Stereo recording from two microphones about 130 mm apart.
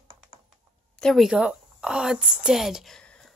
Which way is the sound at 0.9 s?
5° left (ahead or behind).